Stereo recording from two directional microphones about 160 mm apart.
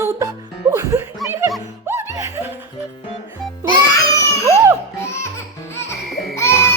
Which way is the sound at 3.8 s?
20° left (ahead or behind).